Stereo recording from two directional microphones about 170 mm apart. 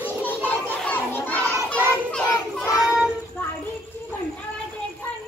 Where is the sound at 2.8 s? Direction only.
5° right (ahead or behind).